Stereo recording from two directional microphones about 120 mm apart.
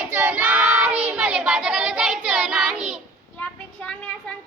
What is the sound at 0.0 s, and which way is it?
Child singing, 15° right (ahead or behind).